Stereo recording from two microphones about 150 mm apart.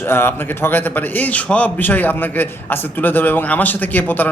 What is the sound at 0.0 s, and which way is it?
A man's voice, 15° left (ahead or behind).